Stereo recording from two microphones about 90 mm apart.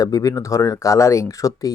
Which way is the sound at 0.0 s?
40° left (ahead or behind).